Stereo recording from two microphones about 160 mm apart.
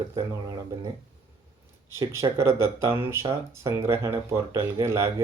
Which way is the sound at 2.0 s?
20° right (ahead or behind).